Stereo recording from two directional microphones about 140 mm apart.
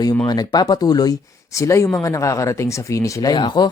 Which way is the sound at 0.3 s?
30° left (ahead or behind).